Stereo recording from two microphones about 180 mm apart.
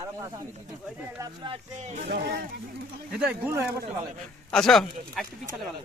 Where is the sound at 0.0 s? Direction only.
15° right (ahead or behind).